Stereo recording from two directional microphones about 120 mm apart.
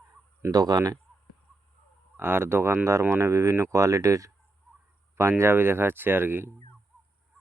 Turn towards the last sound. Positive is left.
turn(degrees=-15)  # may be behind; listen again after turning